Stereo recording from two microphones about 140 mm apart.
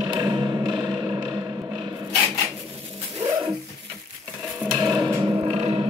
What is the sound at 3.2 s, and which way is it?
Dog, 35° right (ahead or behind).